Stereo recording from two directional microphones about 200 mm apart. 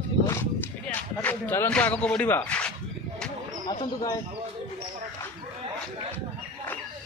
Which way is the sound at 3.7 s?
25° left (ahead or behind).